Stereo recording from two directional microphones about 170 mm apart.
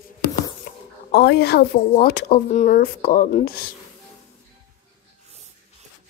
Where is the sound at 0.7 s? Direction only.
65° left (ahead or behind).